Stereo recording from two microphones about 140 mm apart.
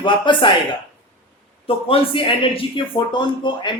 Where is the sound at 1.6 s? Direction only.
40° left (ahead or behind).